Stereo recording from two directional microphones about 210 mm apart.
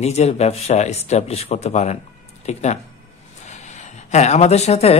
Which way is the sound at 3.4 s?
35° left (ahead or behind).